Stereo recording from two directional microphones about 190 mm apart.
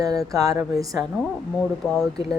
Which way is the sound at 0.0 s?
20° right (ahead or behind).